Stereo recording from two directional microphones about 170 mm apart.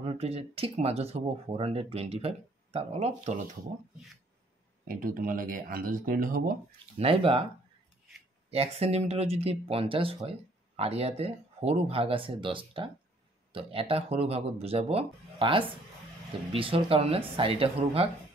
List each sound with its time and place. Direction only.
0.0 s speech: 35° right (ahead or behind)
4.8 s speech: 55° right (ahead or behind)
7.0 s speech: 35° right (ahead or behind)
8.5 s speech: 35° right (ahead or behind)